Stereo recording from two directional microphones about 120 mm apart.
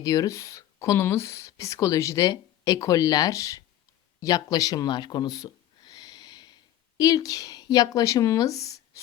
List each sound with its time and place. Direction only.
0.0 s speech: 30° left (ahead or behind)